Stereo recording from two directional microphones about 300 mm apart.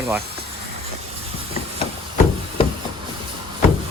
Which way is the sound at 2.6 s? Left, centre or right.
Centre.